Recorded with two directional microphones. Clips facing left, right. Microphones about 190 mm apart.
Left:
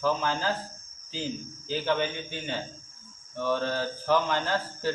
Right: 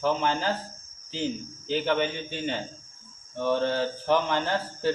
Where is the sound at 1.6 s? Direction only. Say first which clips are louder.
Right 2 dB; 20° right (ahead or behind).